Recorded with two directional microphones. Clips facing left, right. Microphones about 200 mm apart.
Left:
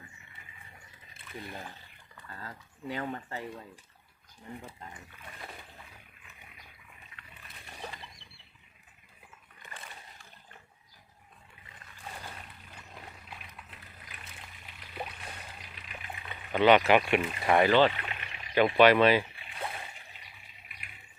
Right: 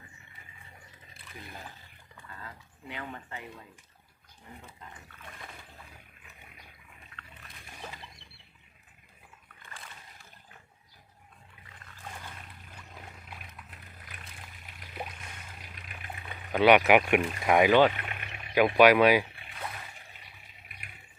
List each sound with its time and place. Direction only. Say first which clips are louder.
2.4 s speech: left 7 dB; 40° left (ahead or behind)
15.7 s water: right 1 dB; 45° right (ahead or behind)
16.3 s speech: right 1 dB; 10° right (ahead or behind)
18.1 s a sound: right 1 dB; 50° right (ahead or behind)
18.5 s speech: right 1 dB; 10° right (ahead or behind)